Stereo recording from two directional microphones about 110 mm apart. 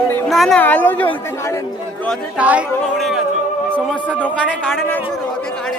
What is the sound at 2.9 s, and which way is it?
Music, centre (ahead or behind).